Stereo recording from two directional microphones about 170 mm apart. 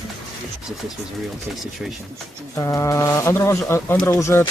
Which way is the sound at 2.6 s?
15° left (ahead or behind).